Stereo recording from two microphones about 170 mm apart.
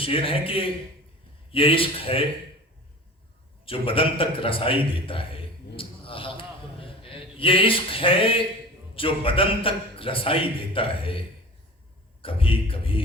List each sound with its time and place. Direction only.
0.0 s a man's voice: 35° left (ahead or behind)
3.7 s a man's voice: 30° left (ahead or behind)
12.2 s a man's voice: 30° left (ahead or behind)